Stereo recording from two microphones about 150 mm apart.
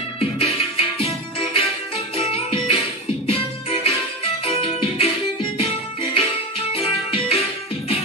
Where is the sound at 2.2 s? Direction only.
40° left (ahead or behind).